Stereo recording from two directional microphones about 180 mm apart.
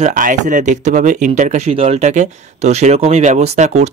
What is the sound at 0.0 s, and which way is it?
Speech, 50° right (ahead or behind).